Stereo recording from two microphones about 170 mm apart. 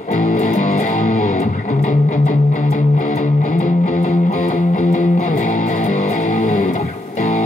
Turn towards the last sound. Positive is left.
turn(degrees=40)  # may be behind; listen again after turning